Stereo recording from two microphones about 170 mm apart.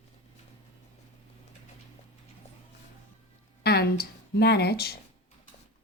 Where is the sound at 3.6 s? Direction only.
70° left (ahead or behind).